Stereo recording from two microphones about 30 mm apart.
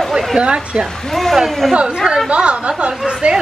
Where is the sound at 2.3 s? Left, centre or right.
Right.